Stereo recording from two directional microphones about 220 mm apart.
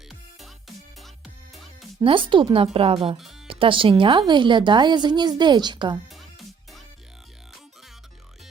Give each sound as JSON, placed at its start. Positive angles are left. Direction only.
{"t": 0.1, "sound": "music", "side_deg": 0}
{"t": 2.0, "sound": "speech", "side_deg": -25}